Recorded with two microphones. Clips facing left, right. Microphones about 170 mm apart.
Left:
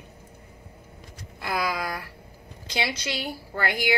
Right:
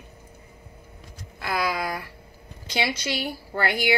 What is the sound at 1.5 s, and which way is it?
A woman's voice, 5° right (ahead or behind).